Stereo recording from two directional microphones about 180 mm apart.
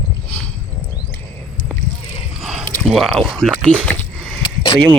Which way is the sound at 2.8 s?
Centre (ahead or behind).